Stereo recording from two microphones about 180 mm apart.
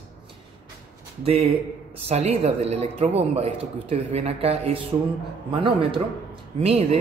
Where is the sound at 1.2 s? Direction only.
35° right (ahead or behind).